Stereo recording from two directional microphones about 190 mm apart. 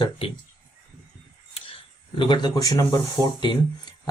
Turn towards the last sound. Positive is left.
turn(degrees=20)  # may be behind; listen again after turning